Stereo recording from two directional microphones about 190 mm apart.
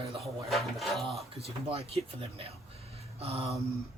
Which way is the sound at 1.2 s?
30° right (ahead or behind).